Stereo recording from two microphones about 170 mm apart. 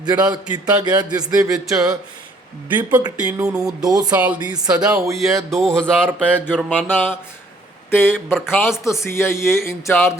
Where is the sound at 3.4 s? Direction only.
5° right (ahead or behind).